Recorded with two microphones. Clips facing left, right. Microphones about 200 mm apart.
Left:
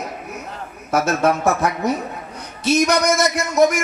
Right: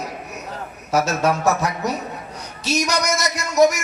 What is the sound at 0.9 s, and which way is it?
Speech, 55° left (ahead or behind).